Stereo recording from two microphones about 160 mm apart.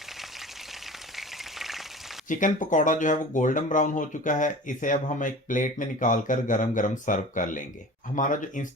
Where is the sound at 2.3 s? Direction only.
55° left (ahead or behind).